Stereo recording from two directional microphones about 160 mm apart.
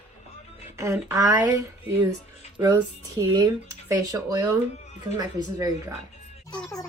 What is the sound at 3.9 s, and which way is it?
A woman's voice, 20° right (ahead or behind).